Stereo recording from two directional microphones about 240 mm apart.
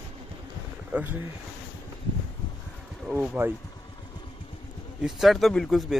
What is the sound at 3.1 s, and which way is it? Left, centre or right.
Speech, centre.